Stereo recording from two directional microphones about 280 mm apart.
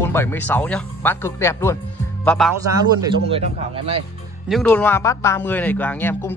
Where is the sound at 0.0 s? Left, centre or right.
Centre.